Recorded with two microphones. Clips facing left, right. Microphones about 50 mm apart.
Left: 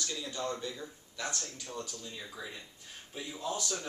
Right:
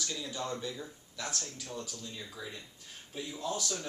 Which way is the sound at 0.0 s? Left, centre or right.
Centre.